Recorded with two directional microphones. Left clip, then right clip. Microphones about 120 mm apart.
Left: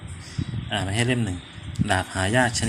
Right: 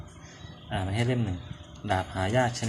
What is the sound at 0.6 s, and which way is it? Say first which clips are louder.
Speech: left 6 dB; 25° left (ahead or behind).